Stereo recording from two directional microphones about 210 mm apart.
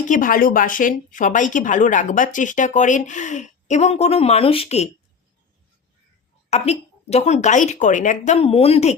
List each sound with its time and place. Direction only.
0.1 s speech: 40° left (ahead or behind)
6.5 s speech: 30° left (ahead or behind)